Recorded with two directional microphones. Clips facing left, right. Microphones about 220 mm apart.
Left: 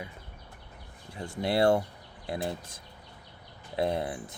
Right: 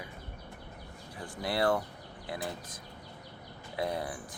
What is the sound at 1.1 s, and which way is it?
Speech, 25° left (ahead or behind).